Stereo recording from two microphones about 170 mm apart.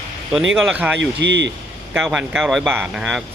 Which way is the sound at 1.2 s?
90° right.